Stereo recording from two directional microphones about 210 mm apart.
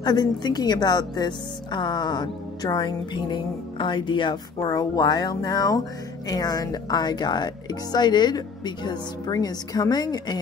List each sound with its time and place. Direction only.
0.0 s a woman's voice: 20° left (ahead or behind)